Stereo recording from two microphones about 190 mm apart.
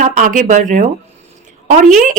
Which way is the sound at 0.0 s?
40° right (ahead or behind).